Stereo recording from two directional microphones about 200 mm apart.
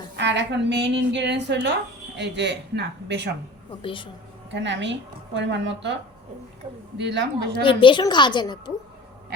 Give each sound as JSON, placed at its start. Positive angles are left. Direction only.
{"t": 0.2, "sound": "a woman's voice", "side_deg": -60}
{"t": 3.8, "sound": "a woman's voice", "side_deg": 25}
{"t": 4.5, "sound": "a woman's voice", "side_deg": -65}
{"t": 6.9, "sound": "a woman's voice", "side_deg": -60}
{"t": 7.6, "sound": "a woman's voice", "side_deg": 25}